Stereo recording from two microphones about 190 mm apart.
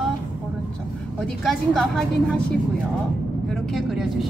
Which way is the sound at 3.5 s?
Centre (ahead or behind).